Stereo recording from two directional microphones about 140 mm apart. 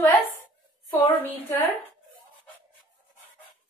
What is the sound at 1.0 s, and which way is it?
Speech, 15° left (ahead or behind).